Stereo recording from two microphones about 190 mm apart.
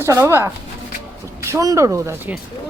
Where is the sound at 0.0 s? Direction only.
15° right (ahead or behind).